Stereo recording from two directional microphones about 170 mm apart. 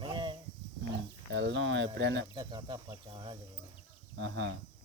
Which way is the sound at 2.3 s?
25° right (ahead or behind).